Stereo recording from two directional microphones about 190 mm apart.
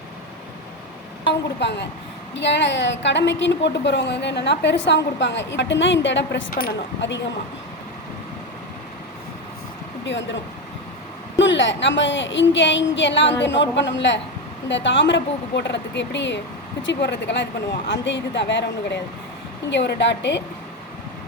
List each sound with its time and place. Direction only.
1.3 s a sound: 65° left (ahead or behind)
2.3 s a woman's voice: 65° left (ahead or behind)
6.5 s speech: 50° left (ahead or behind)
10.0 s speech: 70° left (ahead or behind)
11.3 s a woman's voice: 75° left (ahead or behind)